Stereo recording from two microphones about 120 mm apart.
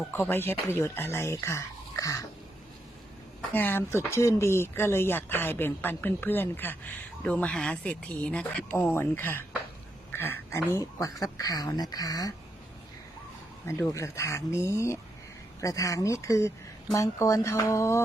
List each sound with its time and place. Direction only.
0.1 s speech: 15° left (ahead or behind)
3.5 s speech: 15° left (ahead or behind)
13.7 s speech: 25° left (ahead or behind)